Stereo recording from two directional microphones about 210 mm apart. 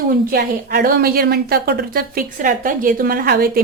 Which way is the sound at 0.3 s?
45° right (ahead or behind).